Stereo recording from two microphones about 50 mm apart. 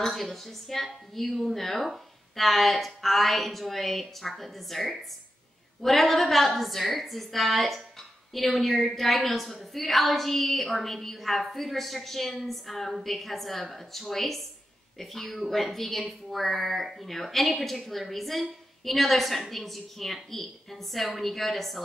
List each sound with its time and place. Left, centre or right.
0.0 s a woman's voice: centre